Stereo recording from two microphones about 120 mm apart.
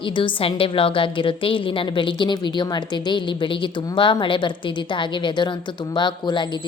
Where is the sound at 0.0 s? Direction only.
45° left (ahead or behind).